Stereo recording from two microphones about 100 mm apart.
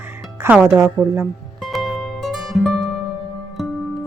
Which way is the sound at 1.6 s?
Centre (ahead or behind).